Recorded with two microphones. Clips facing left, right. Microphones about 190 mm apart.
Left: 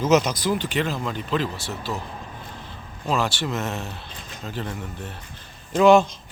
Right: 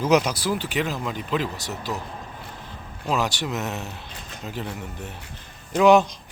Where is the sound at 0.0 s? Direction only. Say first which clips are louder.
Left 1 dB; 10° right (ahead or behind).